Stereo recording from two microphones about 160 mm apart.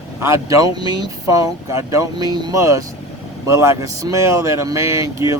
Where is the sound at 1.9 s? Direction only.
20° right (ahead or behind).